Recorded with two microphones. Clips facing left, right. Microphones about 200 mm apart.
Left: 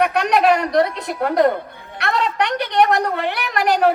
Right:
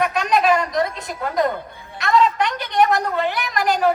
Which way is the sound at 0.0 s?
65° left (ahead or behind).